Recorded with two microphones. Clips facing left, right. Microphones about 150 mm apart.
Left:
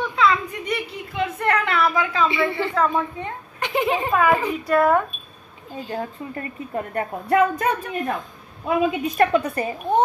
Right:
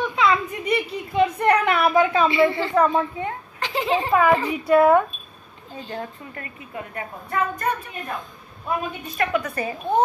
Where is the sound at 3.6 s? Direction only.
20° left (ahead or behind).